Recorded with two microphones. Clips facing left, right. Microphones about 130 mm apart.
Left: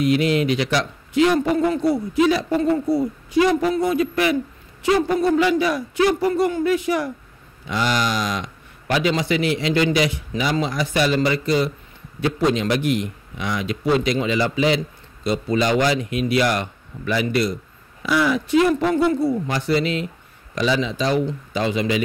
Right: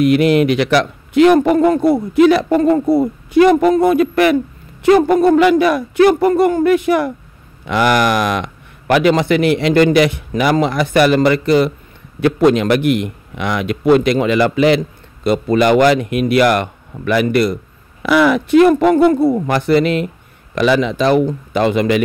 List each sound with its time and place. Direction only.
0.0 s a man's voice: 60° right (ahead or behind)